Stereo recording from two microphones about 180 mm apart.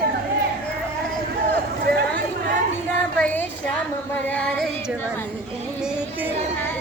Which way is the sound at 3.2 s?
10° left (ahead or behind).